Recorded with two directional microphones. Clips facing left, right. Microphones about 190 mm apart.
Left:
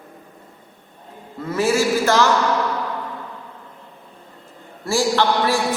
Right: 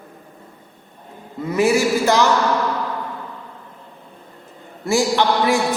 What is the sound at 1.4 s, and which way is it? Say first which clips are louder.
Speech: right 2 dB; 15° right (ahead or behind).